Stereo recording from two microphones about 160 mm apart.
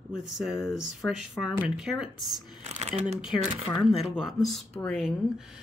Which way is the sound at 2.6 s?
45° right (ahead or behind).